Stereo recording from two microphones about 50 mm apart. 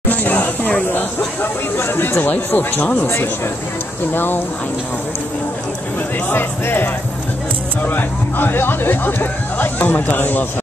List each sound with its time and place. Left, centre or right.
0.1 s a sound: left
1.8 s speech: left
4.1 s speech: left
6.3 s speech: left